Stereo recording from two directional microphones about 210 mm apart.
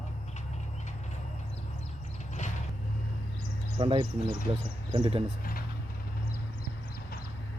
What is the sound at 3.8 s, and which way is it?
Speech, 20° right (ahead or behind).